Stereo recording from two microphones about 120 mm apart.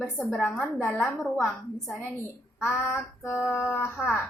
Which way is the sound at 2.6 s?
20° left (ahead or behind).